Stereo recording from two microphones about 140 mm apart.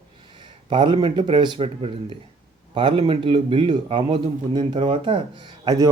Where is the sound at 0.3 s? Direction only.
35° right (ahead or behind).